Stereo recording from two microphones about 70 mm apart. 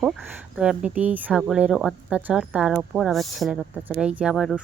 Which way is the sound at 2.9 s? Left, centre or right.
Centre.